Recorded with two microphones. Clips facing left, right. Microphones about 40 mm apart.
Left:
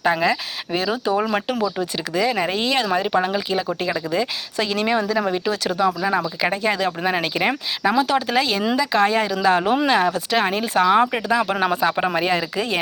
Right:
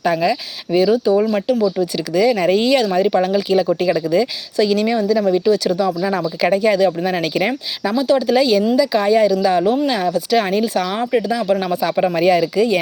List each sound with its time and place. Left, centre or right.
0.0 s speech: centre
1.0 s speech: left
1.6 s speech: left
6.0 s speech: centre
7.9 s speech: left
8.3 s speech: left
10.3 s speech: centre
11.3 s speech: left
11.6 s speech: left